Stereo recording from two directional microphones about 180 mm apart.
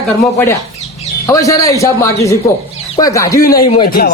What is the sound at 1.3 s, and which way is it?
A man's voice, 20° left (ahead or behind).